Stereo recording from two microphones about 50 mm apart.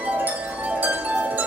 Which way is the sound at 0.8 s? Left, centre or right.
Right.